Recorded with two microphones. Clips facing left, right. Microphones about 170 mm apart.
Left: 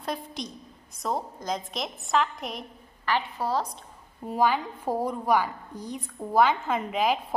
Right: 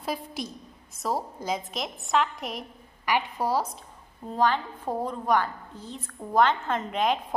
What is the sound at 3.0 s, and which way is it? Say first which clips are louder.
Speech: right 1 dB; 15° right (ahead or behind).